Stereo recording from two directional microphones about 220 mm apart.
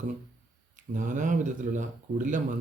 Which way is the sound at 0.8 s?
35° right (ahead or behind).